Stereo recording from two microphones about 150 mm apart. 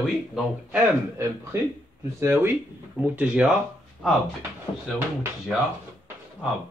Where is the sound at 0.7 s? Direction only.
15° right (ahead or behind).